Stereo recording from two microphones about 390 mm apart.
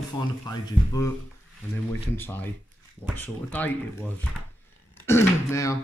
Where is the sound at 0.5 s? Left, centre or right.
Centre.